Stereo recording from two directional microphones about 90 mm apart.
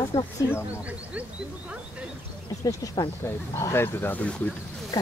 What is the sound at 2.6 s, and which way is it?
Speech, 45° left (ahead or behind).